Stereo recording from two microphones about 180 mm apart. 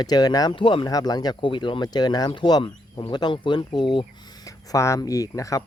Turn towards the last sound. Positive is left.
turn(degrees=20)  # may be behind; listen again after turning